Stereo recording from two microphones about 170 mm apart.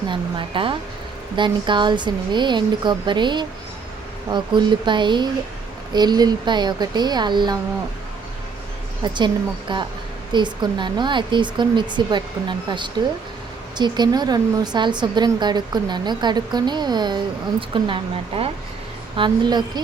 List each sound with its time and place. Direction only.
0.1 s speech: 30° right (ahead or behind)
9.1 s speech: 25° right (ahead or behind)